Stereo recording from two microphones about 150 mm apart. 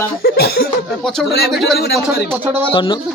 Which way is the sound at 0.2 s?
90° left.